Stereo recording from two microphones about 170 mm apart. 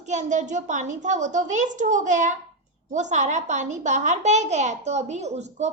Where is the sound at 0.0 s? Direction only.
45° right (ahead or behind).